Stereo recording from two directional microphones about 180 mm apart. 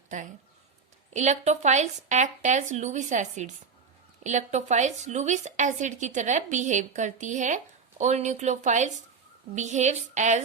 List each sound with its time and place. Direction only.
1.1 s speech: 40° right (ahead or behind)